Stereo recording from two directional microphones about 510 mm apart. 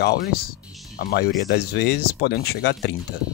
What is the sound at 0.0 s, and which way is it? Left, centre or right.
Speech, centre.